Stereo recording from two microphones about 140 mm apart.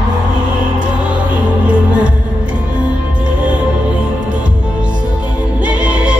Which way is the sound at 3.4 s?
10° right (ahead or behind).